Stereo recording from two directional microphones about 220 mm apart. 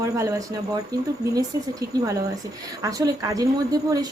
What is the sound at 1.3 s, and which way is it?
A woman's voice, 15° right (ahead or behind).